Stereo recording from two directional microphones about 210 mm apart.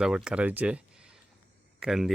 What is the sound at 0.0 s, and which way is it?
Speech, 5° right (ahead or behind).